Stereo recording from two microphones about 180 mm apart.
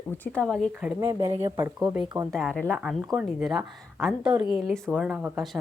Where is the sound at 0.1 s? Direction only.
5° left (ahead or behind).